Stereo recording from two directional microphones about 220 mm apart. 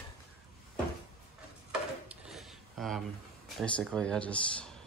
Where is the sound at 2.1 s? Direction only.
Centre (ahead or behind).